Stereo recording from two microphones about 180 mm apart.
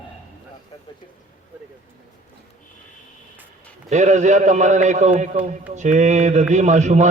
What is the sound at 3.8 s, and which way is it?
A man's voice, 40° right (ahead or behind).